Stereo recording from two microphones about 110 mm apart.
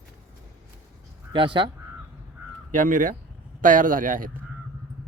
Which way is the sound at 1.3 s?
50° right (ahead or behind).